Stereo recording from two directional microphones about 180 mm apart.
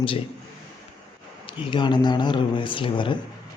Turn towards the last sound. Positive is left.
turn(degrees=25)  # may be behind; listen again after turning